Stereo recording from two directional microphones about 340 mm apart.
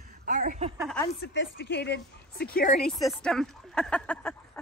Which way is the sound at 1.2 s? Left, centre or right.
Left.